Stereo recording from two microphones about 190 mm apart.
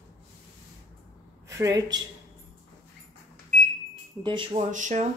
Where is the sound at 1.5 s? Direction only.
20° right (ahead or behind).